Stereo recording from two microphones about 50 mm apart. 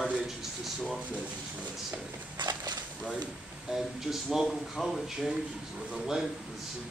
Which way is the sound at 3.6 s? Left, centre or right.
Centre.